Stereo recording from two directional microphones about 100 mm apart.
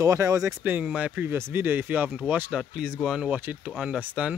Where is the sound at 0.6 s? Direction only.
15° right (ahead or behind).